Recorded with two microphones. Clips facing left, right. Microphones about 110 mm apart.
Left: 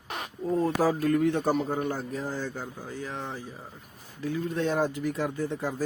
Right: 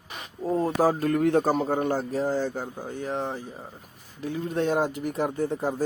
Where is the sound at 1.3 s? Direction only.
40° right (ahead or behind).